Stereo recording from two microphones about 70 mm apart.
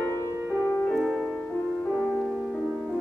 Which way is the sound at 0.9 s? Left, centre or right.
Centre.